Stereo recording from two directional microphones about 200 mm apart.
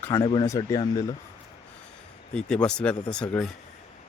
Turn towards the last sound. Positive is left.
turn(degrees=5)  # may be behind; listen again after turning